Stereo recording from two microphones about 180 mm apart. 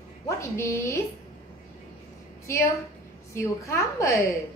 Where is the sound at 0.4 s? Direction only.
15° left (ahead or behind).